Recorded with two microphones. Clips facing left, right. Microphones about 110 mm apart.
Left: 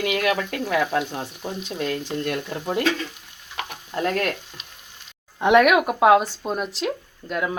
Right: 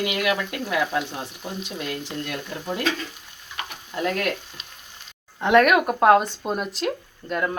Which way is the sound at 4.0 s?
35° left (ahead or behind).